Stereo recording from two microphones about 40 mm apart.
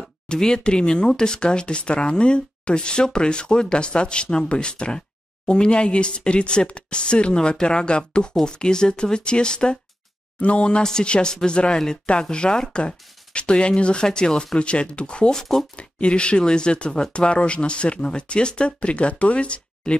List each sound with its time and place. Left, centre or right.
0.3 s speech: centre
10.8 s speech: centre
19.8 s speech: centre